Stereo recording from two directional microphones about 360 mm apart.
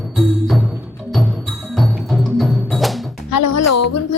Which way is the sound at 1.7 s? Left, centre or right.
Centre.